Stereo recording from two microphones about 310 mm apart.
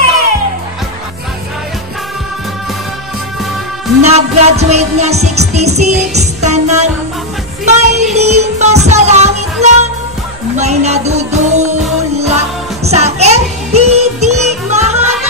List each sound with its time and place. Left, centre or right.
4.0 s music: right